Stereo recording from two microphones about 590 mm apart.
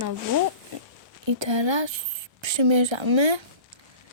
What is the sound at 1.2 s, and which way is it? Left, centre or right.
A woman's voice, right.